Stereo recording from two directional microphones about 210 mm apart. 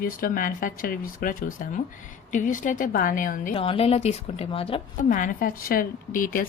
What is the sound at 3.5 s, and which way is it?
A woman's voice, 25° left (ahead or behind).